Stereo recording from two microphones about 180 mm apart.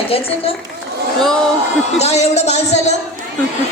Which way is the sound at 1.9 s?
35° left (ahead or behind).